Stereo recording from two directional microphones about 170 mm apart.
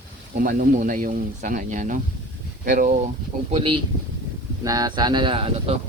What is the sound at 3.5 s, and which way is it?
Speech, 30° right (ahead or behind).